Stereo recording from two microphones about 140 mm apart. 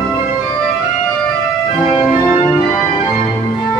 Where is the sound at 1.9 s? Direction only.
40° left (ahead or behind).